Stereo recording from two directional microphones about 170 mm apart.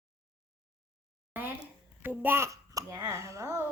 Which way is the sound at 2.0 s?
15° right (ahead or behind).